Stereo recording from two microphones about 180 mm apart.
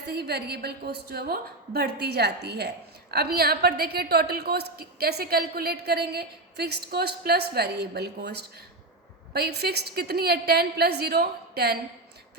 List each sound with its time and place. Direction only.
0.1 s a woman's voice: 65° right (ahead or behind)